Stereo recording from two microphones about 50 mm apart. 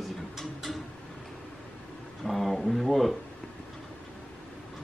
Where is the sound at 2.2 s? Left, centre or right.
Centre.